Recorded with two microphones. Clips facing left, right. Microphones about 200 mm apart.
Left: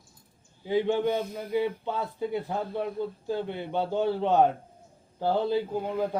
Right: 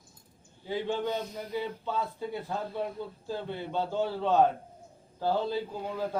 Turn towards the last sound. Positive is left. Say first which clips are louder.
# left 4 dB
turn(degrees=15)  # may be behind; listen again after turning